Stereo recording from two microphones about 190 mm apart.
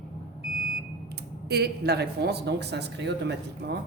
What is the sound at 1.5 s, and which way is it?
Speech, 60° right (ahead or behind).